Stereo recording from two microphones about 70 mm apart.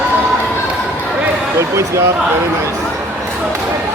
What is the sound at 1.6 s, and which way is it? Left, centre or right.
Speech, right.